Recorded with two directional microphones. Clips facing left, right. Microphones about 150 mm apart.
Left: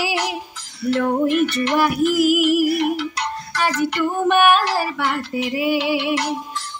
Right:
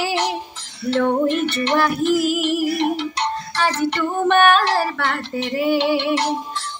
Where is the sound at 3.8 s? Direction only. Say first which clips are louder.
Left 1 dB; 10° left (ahead or behind).